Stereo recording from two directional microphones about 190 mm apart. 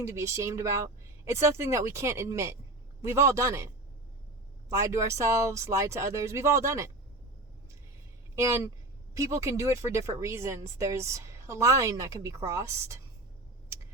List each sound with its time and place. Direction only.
0.0 s speech: 15° right (ahead or behind)
4.7 s speech: 15° right (ahead or behind)
8.4 s speech: 15° right (ahead or behind)